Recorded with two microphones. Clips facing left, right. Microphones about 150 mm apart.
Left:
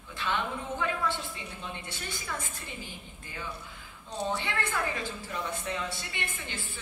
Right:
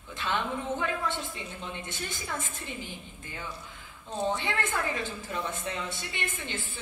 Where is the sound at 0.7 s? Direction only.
20° right (ahead or behind).